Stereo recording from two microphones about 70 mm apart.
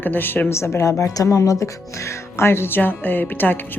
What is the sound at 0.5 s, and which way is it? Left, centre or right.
A woman's voice, left.